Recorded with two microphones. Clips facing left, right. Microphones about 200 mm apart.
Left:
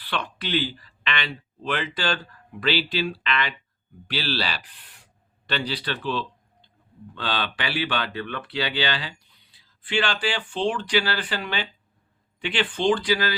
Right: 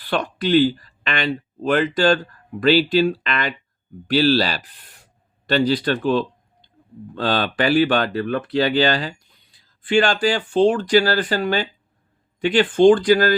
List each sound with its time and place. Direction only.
0.0 s speech: 45° right (ahead or behind)